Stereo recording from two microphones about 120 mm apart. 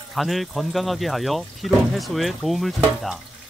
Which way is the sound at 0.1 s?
Centre (ahead or behind).